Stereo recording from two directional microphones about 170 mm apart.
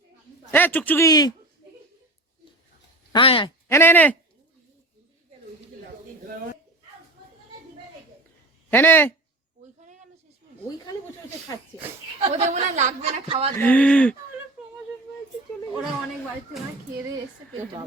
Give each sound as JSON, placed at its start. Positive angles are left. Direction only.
{"t": 0.5, "sound": "speech", "side_deg": 10}
{"t": 3.1, "sound": "speech", "side_deg": 30}
{"t": 3.7, "sound": "speech", "side_deg": 15}
{"t": 8.7, "sound": "speech", "side_deg": 10}
{"t": 12.2, "sound": "a woman's voice", "side_deg": -40}
{"t": 13.6, "sound": "speech", "side_deg": 10}